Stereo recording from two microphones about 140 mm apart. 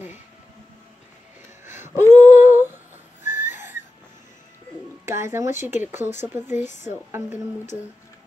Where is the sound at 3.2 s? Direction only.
60° left (ahead or behind).